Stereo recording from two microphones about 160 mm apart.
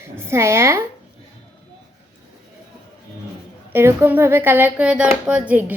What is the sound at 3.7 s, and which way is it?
Speech, 15° right (ahead or behind).